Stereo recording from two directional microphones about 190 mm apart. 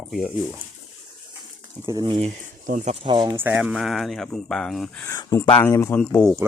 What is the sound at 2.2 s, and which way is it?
Speech, 40° right (ahead or behind).